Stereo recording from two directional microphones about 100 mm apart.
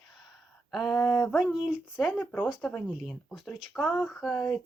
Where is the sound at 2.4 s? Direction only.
5° right (ahead or behind).